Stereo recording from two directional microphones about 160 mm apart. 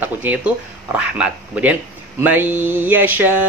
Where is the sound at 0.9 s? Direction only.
5° right (ahead or behind).